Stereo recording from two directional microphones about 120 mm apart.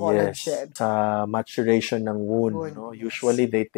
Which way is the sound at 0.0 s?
15° left (ahead or behind).